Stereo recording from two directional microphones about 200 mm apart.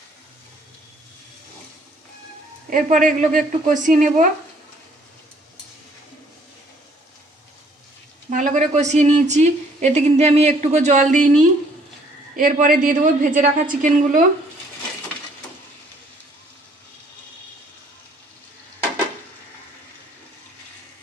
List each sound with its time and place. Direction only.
2.7 s a woman's voice: 40° right (ahead or behind)
8.3 s a woman's voice: 40° right (ahead or behind)